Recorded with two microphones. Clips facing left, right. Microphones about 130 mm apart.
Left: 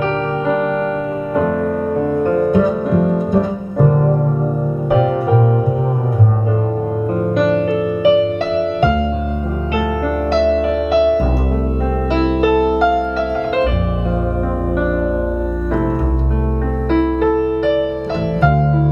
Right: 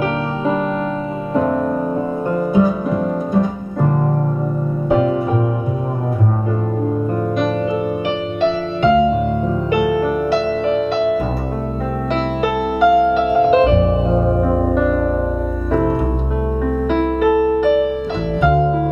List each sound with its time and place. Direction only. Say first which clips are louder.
2.0 s music: left 4 dB; 10° right (ahead or behind)
10.3 s music: left 2 dB; centre (ahead or behind)
12.4 s music: left 3 dB; centre (ahead or behind)
13.4 s piano: right 6 dB; 25° right (ahead or behind)
14.7 s music: right 1 dB; 5° left (ahead or behind)
16.9 s music: left 2 dB; 5° right (ahead or behind)